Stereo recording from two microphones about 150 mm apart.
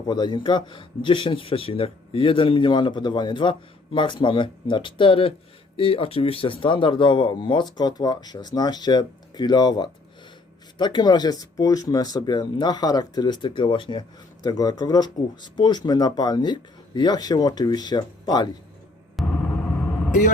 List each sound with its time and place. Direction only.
0.1 s a man's voice: 30° left (ahead or behind)
19.2 s vehicle: centre (ahead or behind)